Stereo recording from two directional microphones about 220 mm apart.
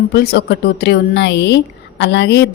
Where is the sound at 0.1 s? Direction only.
50° left (ahead or behind).